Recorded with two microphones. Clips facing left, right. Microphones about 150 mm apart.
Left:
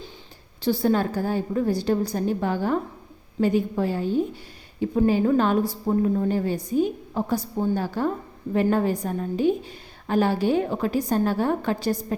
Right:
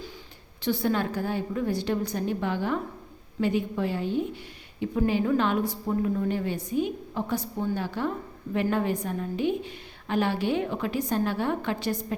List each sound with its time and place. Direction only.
0.6 s a woman's voice: 35° left (ahead or behind)